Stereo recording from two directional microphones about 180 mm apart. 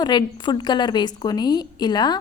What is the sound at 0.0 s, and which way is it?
A woman's voice, 25° left (ahead or behind).